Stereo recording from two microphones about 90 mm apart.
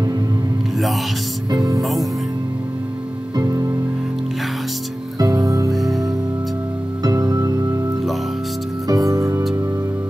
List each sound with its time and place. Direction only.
1.5 s speech: 40° right (ahead or behind)
1.8 s speech: centre (ahead or behind)
3.3 s music: 40° right (ahead or behind)
5.2 s music: 40° right (ahead or behind)
5.8 s music: centre (ahead or behind)
7.0 s music: 45° right (ahead or behind)
8.8 s music: 40° right (ahead or behind)